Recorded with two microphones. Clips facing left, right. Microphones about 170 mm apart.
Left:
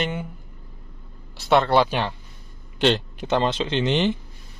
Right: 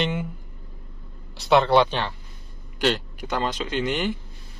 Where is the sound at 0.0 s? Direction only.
Centre (ahead or behind).